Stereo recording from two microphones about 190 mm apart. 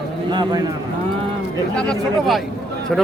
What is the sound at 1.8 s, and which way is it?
Speech, centre (ahead or behind).